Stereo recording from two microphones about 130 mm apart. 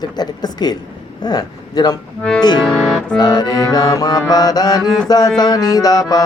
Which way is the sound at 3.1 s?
30° left (ahead or behind).